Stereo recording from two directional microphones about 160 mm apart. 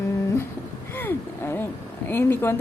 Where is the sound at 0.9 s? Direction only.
15° left (ahead or behind).